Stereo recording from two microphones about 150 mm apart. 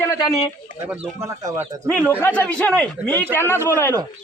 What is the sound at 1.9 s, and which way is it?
A man's voice, 10° left (ahead or behind).